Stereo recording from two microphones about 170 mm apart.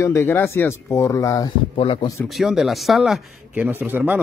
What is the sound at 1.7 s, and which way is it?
Speech, 30° left (ahead or behind).